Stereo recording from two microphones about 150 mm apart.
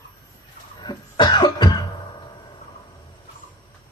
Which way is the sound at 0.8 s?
30° left (ahead or behind).